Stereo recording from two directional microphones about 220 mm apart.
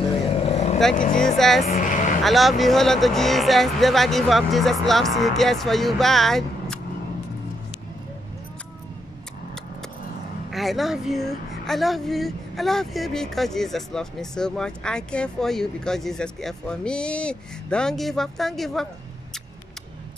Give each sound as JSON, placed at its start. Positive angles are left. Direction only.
{"t": 0.3, "sound": "vehicle", "side_deg": 25}
{"t": 0.7, "sound": "speech", "side_deg": 0}
{"t": 1.7, "sound": "vehicle", "side_deg": 35}
{"t": 2.2, "sound": "speech", "side_deg": 0}
{"t": 10.5, "sound": "speech", "side_deg": 0}